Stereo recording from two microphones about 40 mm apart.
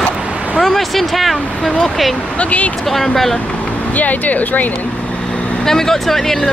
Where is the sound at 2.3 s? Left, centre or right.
Left.